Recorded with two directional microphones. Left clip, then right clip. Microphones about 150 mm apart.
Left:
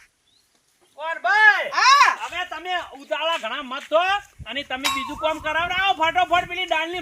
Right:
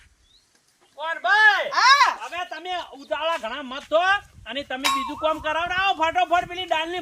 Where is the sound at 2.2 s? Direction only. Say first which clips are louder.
Left 2 dB; 5° right (ahead or behind).